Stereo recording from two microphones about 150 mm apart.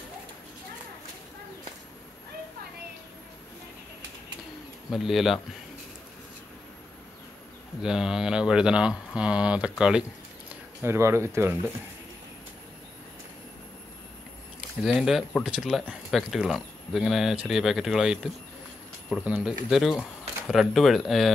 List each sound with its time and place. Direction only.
4.9 s speech: centre (ahead or behind)
7.8 s speech: 5° right (ahead or behind)
10.8 s speech: 15° right (ahead or behind)
14.8 s speech: 5° right (ahead or behind)